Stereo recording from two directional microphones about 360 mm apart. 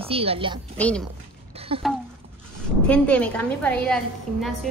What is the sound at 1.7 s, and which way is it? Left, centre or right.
Speech, centre.